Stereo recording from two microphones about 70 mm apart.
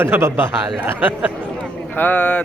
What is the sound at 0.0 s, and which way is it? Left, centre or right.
Speech, right.